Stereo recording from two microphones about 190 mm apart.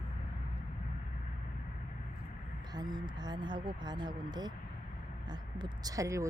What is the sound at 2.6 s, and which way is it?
Speech, 20° right (ahead or behind).